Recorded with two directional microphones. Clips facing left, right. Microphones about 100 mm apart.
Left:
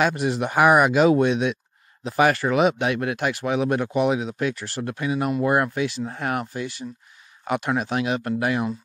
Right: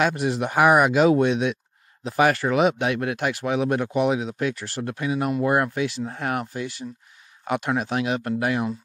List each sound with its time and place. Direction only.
0.0 s speech: 20° left (ahead or behind)